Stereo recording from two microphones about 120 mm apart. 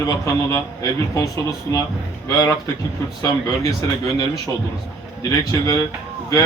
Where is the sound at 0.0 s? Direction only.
30° left (ahead or behind).